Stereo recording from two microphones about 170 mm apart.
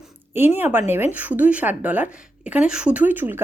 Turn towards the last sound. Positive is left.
turn(degrees=-10)  # may be behind; listen again after turning